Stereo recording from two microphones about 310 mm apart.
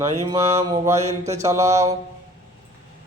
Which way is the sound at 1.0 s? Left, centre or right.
Right.